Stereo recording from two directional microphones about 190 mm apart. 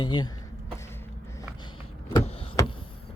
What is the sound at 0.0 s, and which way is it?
Speech, 25° left (ahead or behind).